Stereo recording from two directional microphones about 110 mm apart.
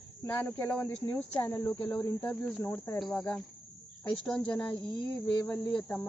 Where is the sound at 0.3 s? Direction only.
20° left (ahead or behind).